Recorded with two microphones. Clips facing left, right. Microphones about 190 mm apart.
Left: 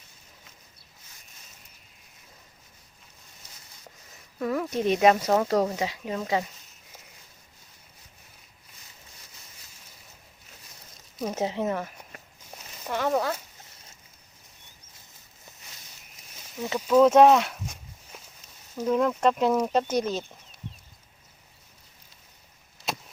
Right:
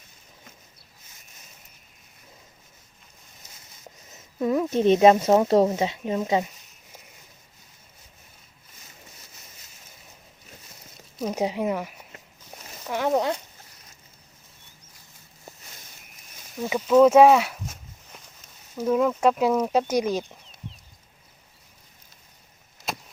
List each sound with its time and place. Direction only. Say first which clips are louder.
4.1 s speech: right 5 dB; 20° right (ahead or behind)
11.3 s speech: right 2 dB; 15° right (ahead or behind)
16.6 s speech: right 3 dB; 10° right (ahead or behind)